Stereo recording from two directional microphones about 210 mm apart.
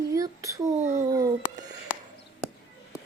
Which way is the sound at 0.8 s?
35° right (ahead or behind).